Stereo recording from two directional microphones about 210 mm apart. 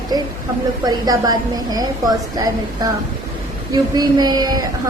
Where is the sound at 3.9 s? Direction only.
20° right (ahead or behind).